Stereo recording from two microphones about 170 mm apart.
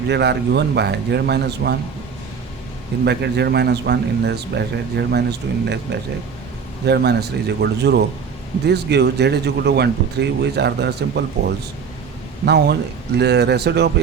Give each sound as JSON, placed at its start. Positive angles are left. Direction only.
{"t": 0.1, "sound": "speech", "side_deg": -80}
{"t": 3.0, "sound": "speech", "side_deg": -80}
{"t": 5.6, "sound": "speech", "side_deg": -90}
{"t": 6.8, "sound": "speech", "side_deg": -75}